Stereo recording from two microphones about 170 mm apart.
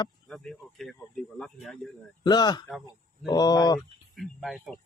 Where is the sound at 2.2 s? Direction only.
25° left (ahead or behind).